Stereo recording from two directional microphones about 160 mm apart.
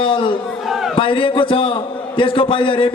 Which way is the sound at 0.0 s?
30° left (ahead or behind).